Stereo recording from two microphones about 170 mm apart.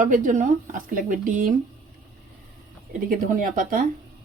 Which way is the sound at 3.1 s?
55° right (ahead or behind).